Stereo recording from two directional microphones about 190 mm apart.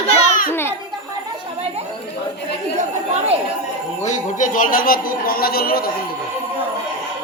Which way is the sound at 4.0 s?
40° left (ahead or behind).